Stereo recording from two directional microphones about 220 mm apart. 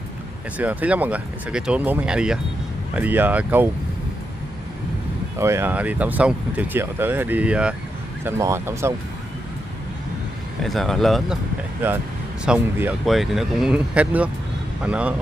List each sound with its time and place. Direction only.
0.6 s speech: 5° right (ahead or behind)
5.4 s speech: 10° right (ahead or behind)
10.6 s speech: centre (ahead or behind)
12.4 s speech: 10° right (ahead or behind)